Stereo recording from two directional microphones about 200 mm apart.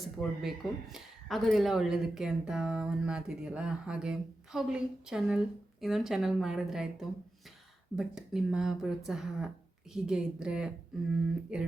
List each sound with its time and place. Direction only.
0.2 s speech: centre (ahead or behind)